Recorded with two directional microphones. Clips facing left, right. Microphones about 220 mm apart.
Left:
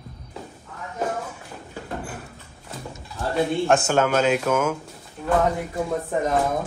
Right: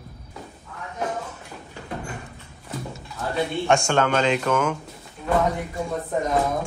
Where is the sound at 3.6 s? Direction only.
5° left (ahead or behind).